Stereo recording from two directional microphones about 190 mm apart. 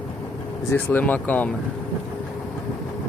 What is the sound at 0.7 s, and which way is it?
Speech, 10° left (ahead or behind).